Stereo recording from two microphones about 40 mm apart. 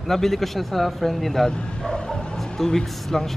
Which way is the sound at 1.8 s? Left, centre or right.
Centre.